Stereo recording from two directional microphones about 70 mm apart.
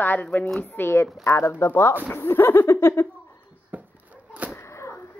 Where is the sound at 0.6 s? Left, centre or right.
Left.